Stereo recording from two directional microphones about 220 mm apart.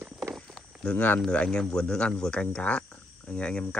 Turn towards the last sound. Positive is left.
turn(degrees=5)  # may be behind; listen again after turning